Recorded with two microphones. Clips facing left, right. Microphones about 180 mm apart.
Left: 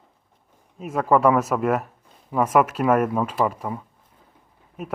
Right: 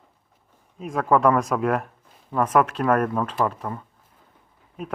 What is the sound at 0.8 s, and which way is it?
Speech, 5° left (ahead or behind).